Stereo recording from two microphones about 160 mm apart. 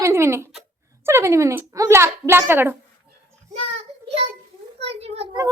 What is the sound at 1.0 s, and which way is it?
A child's voice, 15° right (ahead or behind).